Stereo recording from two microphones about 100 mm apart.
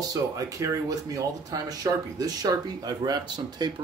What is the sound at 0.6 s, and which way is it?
Speech, 35° right (ahead or behind).